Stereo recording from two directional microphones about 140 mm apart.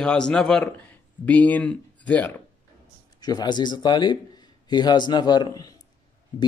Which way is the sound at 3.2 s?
30° left (ahead or behind).